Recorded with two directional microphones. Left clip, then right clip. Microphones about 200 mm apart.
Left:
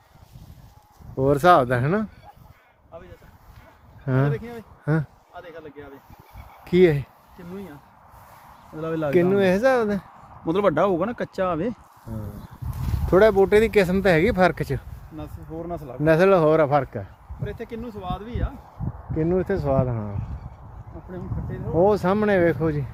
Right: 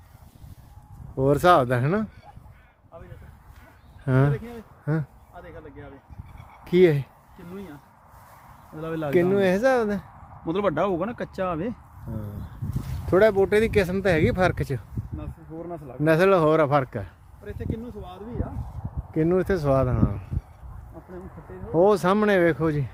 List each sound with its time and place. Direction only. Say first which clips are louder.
1.1 s speech: left 2 dB; 5° right (ahead or behind)
4.0 s speech: right 1 dB; 15° right (ahead or behind)
5.3 s basketball bounce: left 5 dB; 40° left (ahead or behind)
6.7 s speech: left 1 dB; 10° right (ahead or behind)
8.8 s speech: left 4 dB; 20° left (ahead or behind)
9.0 s speech: left 2 dB; 5° right (ahead or behind)
10.4 s speech: left 4 dB; 30° left (ahead or behind)
13.1 s speech: left 3 dB; centre (ahead or behind)
15.2 s speech: left 5 dB; 50° left (ahead or behind)
16.0 s speech: left 2 dB; 5° right (ahead or behind)
17.4 s speech: left 2 dB; 40° left (ahead or behind)
17.8 s speech: left 6 dB; 20° left (ahead or behind)
19.1 s speech: right 1 dB; 25° right (ahead or behind)
21.8 s speech: even; 20° right (ahead or behind)